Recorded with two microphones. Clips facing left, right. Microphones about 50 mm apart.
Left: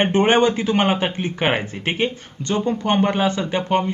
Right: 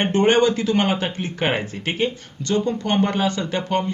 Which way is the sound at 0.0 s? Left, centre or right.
Left.